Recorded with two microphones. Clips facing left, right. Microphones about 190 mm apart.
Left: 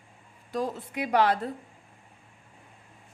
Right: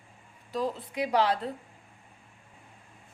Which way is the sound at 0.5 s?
50° left (ahead or behind).